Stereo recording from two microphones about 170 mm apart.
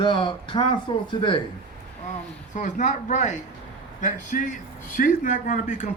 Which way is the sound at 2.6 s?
45° left (ahead or behind).